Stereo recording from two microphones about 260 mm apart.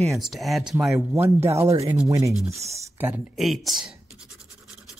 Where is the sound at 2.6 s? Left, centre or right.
Centre.